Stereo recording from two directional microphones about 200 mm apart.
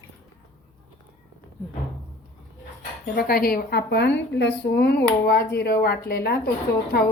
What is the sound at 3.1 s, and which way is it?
A woman's voice, 50° left (ahead or behind).